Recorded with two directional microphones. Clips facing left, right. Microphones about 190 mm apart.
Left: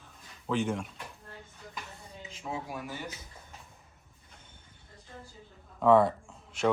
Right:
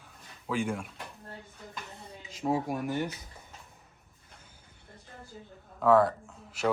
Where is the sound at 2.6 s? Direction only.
60° right (ahead or behind).